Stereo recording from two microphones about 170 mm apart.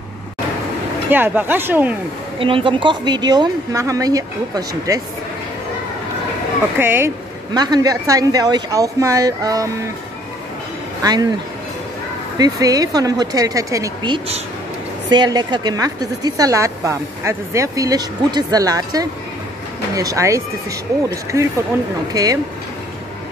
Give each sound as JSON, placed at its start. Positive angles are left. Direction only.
{"t": 1.1, "sound": "speech", "side_deg": -10}
{"t": 2.3, "sound": "a woman's voice", "side_deg": -30}
{"t": 6.8, "sound": "a woman's voice", "side_deg": -15}
{"t": 11.0, "sound": "speech", "side_deg": -20}
{"t": 12.4, "sound": "a woman's voice", "side_deg": -20}